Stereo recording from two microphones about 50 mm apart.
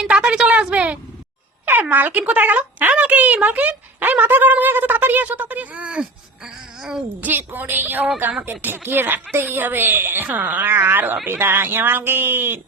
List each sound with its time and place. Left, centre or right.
0.0 s a sound: centre
1.8 s speech: right
5.8 s babbling: centre
7.2 s speech: right
10.2 s speech: right
10.7 s speech: right